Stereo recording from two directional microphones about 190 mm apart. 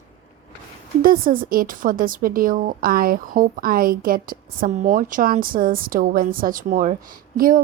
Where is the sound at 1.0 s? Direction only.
45° right (ahead or behind).